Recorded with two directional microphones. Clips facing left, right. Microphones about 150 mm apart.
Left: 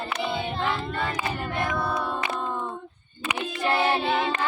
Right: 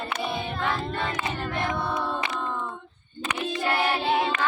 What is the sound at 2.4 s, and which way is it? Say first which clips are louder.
Female singing: left 1 dB; 15° left (ahead or behind).